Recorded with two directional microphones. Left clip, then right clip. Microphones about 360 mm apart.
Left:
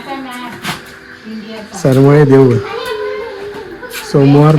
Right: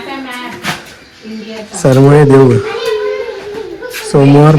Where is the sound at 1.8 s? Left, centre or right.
Right.